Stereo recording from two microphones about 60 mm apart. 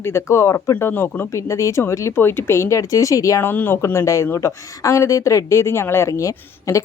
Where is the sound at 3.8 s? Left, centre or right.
Left.